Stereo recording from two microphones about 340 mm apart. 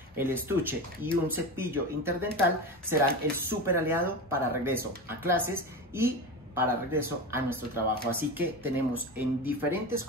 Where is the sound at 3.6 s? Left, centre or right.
Centre.